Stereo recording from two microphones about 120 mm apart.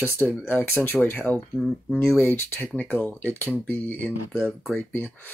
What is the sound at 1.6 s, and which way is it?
Speech, 5° left (ahead or behind).